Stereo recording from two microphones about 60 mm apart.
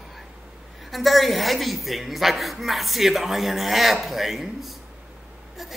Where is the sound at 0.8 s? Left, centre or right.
Centre.